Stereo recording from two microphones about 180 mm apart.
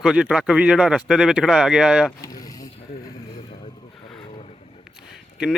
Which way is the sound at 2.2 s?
20° left (ahead or behind).